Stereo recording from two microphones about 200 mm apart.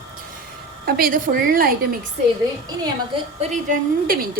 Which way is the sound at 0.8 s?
45° right (ahead or behind).